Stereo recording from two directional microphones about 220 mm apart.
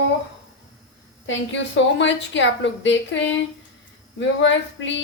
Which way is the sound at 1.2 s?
55° left (ahead or behind).